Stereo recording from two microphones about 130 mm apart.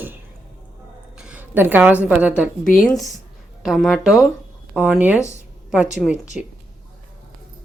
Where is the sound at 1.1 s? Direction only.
10° right (ahead or behind).